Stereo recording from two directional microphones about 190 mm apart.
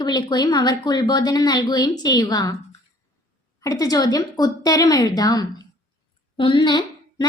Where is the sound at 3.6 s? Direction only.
20° left (ahead or behind).